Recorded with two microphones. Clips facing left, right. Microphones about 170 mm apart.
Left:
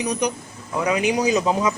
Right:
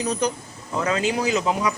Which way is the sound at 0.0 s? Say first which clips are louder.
Left 1 dB; 15° left (ahead or behind).